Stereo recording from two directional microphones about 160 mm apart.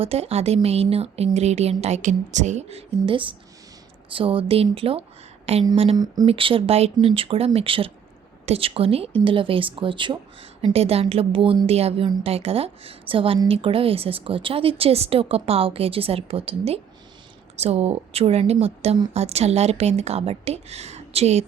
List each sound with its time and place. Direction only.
0.0 s a woman's voice: 40° right (ahead or behind)